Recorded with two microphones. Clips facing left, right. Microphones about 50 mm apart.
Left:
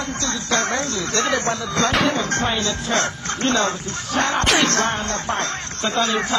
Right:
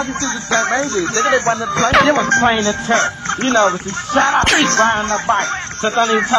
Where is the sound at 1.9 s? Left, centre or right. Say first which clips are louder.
Right 8 dB; right.